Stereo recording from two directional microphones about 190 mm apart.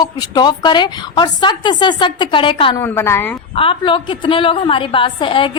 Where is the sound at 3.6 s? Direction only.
25° left (ahead or behind).